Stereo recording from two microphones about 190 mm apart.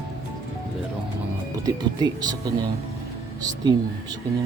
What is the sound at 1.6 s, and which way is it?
Speech, 20° right (ahead or behind).